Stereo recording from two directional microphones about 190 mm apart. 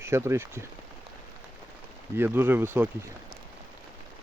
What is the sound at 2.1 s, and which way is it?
Speech, 10° right (ahead or behind).